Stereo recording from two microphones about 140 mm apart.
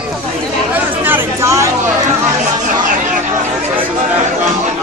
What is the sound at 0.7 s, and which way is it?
Chatter, 15° right (ahead or behind).